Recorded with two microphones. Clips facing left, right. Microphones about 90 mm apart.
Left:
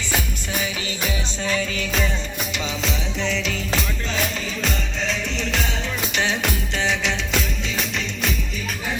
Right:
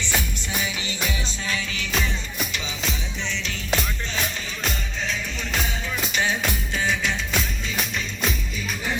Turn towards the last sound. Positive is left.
turn(degrees=85)